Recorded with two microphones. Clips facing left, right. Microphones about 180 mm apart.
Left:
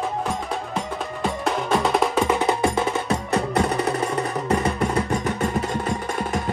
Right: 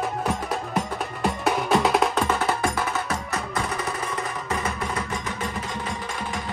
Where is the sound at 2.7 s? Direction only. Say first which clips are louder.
Left 4 dB; 30° left (ahead or behind).